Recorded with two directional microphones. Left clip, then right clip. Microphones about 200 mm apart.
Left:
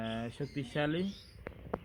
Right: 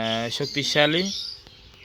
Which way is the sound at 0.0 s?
40° right (ahead or behind).